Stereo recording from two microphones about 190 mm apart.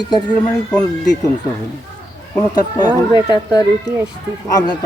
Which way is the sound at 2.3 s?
20° left (ahead or behind).